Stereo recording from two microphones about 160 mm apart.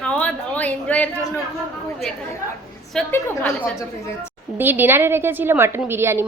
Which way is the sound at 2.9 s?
5° left (ahead or behind).